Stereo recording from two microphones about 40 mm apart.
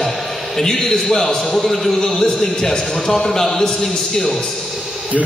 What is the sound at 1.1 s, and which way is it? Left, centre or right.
Speech, centre.